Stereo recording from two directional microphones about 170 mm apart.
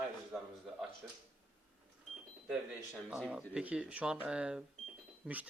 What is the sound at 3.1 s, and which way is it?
Speech, 5° right (ahead or behind).